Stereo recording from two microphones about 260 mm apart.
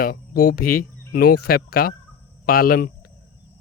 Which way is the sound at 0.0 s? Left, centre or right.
Left.